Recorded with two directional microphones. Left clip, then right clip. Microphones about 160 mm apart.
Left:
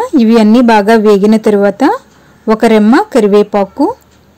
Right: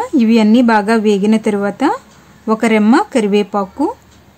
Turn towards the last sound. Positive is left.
turn(degrees=20)  # may be behind; listen again after turning